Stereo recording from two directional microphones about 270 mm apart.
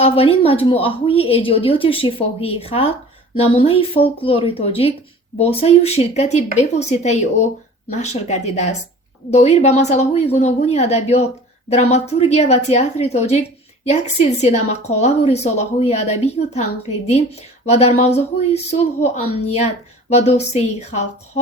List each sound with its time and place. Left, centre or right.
0.0 s speech: left